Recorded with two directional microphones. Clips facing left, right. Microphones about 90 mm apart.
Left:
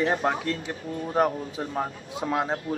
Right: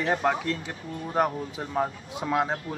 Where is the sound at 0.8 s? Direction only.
35° left (ahead or behind).